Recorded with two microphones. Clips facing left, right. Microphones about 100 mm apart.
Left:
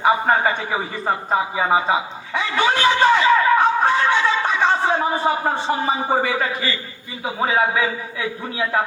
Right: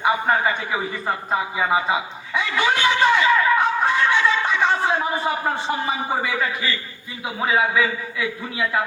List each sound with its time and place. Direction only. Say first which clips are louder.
0.0 s a man's voice: left 3 dB; 30° left (ahead or behind)